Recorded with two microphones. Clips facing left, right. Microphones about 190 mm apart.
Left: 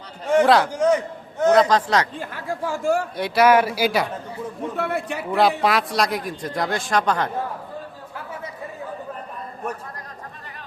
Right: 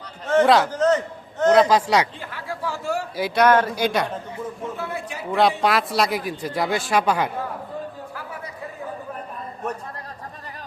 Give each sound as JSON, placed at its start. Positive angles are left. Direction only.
{"t": 0.4, "sound": "a man's voice", "side_deg": 0}
{"t": 0.7, "sound": "a sound", "side_deg": 10}
{"t": 1.5, "sound": "a man's voice", "side_deg": -10}
{"t": 2.1, "sound": "speech", "side_deg": 45}
{"t": 3.2, "sound": "a man's voice", "side_deg": 0}
{"t": 4.8, "sound": "a man's voice", "side_deg": 65}
{"t": 5.3, "sound": "a man's voice", "side_deg": 0}